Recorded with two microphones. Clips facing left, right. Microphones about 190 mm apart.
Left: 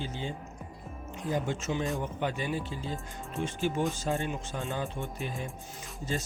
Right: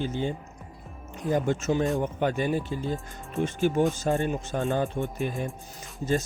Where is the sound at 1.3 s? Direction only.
45° right (ahead or behind).